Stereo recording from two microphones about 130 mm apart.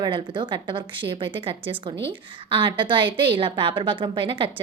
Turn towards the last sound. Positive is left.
turn(degrees=-40)  # may be behind; listen again after turning